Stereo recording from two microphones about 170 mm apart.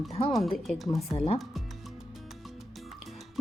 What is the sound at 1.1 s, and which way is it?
Speech, 35° left (ahead or behind).